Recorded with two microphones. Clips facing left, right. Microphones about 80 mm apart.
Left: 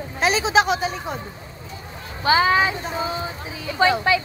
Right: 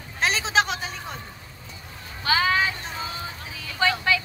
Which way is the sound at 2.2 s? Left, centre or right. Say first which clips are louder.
Left 5 dB; left.